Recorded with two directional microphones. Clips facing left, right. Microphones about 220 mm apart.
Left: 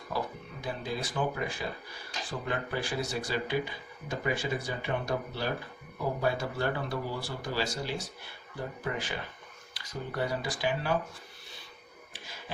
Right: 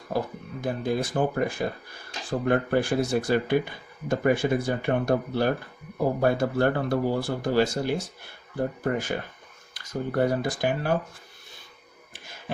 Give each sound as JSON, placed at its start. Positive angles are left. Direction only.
{"t": 0.1, "sound": "speech", "side_deg": -50}